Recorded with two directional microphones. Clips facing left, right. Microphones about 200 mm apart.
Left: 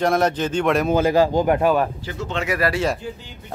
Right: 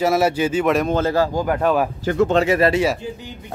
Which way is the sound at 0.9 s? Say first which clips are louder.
Left 2 dB; 15° left (ahead or behind).